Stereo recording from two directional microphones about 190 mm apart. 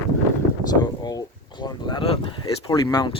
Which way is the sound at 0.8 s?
20° left (ahead or behind).